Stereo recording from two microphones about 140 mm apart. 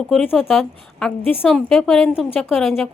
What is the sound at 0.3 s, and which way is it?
A woman's voice, centre (ahead or behind).